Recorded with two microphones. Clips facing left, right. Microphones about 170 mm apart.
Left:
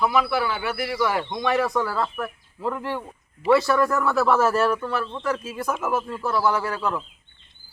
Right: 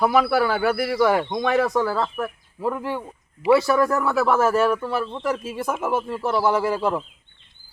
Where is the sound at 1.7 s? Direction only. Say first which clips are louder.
Right 3 dB; 20° right (ahead or behind).